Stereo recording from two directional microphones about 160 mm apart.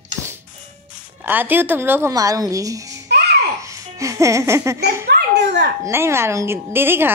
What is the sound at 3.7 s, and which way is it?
Music, 20° right (ahead or behind).